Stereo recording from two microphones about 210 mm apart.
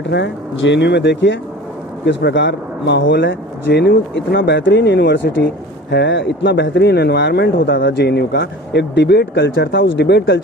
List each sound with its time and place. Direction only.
0.1 s speech: 60° left (ahead or behind)